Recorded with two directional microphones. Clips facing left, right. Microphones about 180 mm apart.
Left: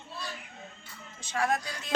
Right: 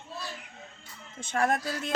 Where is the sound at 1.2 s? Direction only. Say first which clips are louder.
Right 3 dB; 50° right (ahead or behind).